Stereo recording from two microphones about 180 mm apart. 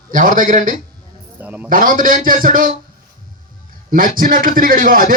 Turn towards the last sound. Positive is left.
turn(degrees=-50)  # may be behind; listen again after turning